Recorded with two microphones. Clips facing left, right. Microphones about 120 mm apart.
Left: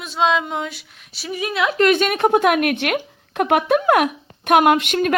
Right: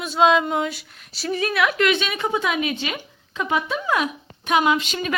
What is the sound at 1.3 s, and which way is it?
Speech, 15° left (ahead or behind).